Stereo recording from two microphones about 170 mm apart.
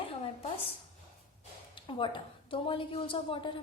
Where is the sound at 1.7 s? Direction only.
30° left (ahead or behind).